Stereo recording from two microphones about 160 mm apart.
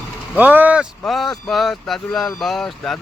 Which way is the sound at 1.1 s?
Centre (ahead or behind).